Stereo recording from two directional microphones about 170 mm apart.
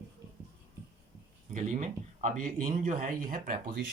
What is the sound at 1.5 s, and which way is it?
Speech, 45° right (ahead or behind).